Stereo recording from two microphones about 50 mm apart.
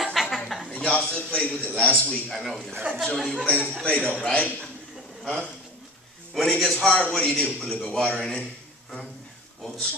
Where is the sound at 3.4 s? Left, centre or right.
Left.